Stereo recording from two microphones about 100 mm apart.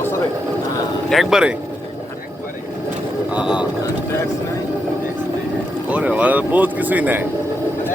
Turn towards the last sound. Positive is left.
turn(degrees=-15)  # may be behind; listen again after turning